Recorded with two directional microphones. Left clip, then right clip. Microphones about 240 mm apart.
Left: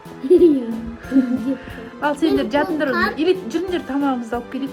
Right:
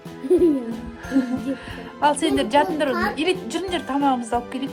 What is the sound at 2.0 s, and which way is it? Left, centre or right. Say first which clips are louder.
A woman's voice: left 1 dB; centre.